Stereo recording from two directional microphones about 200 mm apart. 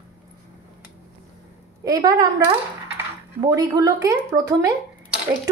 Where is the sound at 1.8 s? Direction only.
20° right (ahead or behind).